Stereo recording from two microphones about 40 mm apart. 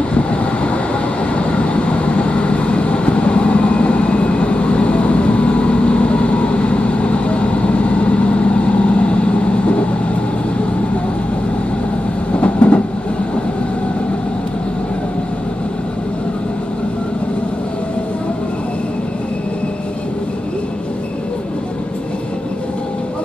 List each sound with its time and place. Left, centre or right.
0.1 s vehicle: left
12.4 s train: left